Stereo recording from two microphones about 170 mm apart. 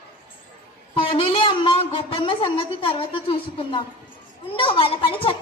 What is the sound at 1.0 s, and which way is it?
A woman's voice, 30° left (ahead or behind).